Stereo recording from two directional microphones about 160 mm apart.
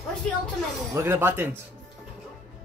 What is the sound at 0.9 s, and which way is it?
Speech, 15° right (ahead or behind).